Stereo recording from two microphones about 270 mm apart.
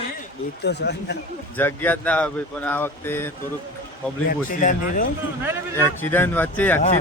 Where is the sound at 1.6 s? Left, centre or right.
Centre.